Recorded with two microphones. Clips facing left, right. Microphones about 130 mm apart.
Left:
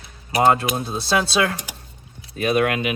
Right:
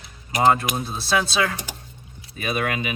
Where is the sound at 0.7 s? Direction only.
Centre (ahead or behind).